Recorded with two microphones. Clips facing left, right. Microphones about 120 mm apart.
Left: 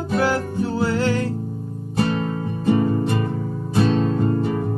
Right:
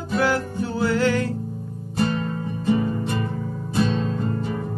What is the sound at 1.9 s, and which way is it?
Music, 60° left (ahead or behind).